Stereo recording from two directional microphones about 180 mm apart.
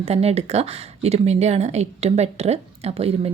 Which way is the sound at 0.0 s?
35° right (ahead or behind).